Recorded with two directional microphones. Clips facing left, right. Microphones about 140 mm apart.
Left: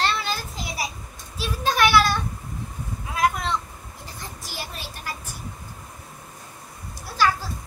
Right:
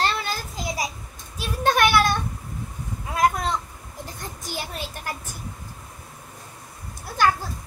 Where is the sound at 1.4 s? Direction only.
50° right (ahead or behind).